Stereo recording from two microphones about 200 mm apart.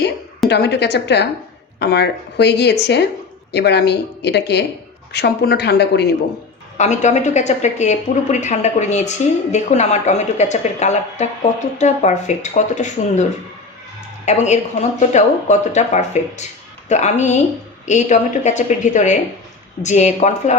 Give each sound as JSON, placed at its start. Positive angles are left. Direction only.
{"t": 0.4, "sound": "speech", "side_deg": 55}
{"t": 6.7, "sound": "speech", "side_deg": 35}
{"t": 14.3, "sound": "speech", "side_deg": 35}